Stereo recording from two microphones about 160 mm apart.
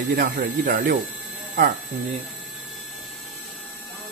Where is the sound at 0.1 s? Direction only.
65° right (ahead or behind).